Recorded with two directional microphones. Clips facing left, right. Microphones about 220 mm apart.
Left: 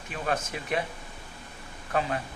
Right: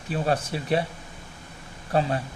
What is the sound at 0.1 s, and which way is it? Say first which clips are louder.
Speech: right 5 dB; 35° right (ahead or behind).